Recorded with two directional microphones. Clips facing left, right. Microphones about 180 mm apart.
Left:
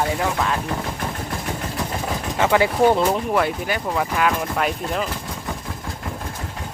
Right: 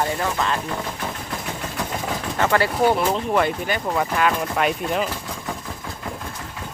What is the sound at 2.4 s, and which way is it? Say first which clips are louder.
Speech: left 2 dB; 10° left (ahead or behind).